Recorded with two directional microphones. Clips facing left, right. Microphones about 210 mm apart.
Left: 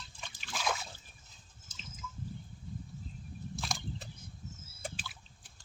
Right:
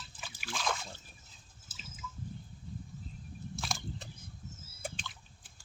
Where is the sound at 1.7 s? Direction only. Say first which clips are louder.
Even; 5° right (ahead or behind).